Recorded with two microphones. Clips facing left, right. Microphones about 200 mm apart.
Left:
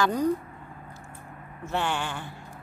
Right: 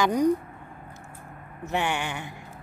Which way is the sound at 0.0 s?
15° right (ahead or behind).